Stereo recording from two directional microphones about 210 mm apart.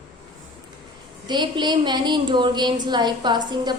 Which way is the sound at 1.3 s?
20° right (ahead or behind).